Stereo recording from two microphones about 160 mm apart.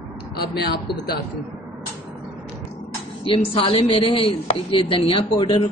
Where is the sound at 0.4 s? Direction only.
80° left.